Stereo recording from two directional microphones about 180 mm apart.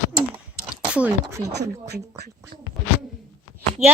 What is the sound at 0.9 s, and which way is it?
Speech, 10° right (ahead or behind).